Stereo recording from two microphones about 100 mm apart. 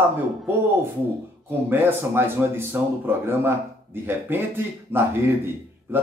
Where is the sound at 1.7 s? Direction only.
25° right (ahead or behind).